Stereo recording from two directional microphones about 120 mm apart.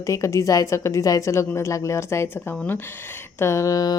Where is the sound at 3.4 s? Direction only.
25° left (ahead or behind).